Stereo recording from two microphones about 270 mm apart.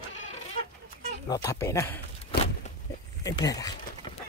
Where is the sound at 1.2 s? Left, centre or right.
Centre.